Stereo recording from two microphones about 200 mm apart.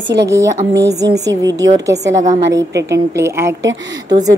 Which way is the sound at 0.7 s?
55° right (ahead or behind).